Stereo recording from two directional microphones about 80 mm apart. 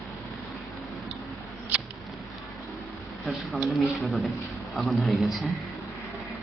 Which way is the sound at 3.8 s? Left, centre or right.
Centre.